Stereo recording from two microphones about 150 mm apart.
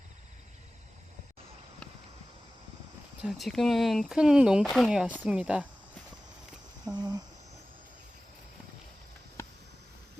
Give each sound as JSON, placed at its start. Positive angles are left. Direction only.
{"t": 3.2, "sound": "speech", "side_deg": 0}
{"t": 6.9, "sound": "cricket", "side_deg": -30}